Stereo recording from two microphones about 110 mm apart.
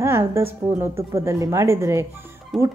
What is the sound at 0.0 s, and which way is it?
Speech, 25° right (ahead or behind).